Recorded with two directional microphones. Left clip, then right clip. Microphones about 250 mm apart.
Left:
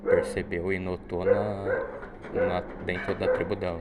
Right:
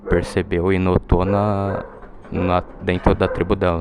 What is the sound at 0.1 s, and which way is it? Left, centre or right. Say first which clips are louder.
Speech: right 5 dB; right.